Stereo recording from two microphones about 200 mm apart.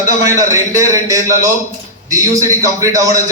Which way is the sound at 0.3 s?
15° right (ahead or behind).